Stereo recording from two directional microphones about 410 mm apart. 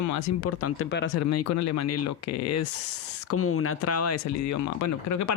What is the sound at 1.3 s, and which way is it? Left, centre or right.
Speech, left.